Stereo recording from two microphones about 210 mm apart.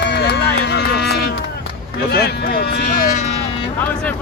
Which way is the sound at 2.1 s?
50° left (ahead or behind).